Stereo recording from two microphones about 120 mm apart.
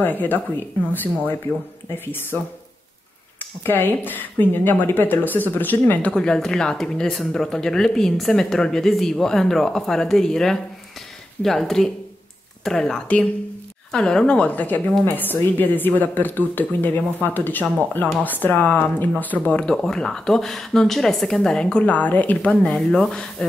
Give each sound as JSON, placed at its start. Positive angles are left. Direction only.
{"t": 0.0, "sound": "speech", "side_deg": 15}
{"t": 2.3, "sound": "speech", "side_deg": 10}